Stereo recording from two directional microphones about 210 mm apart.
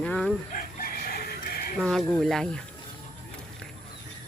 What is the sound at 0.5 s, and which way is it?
Chicken, 45° left (ahead or behind).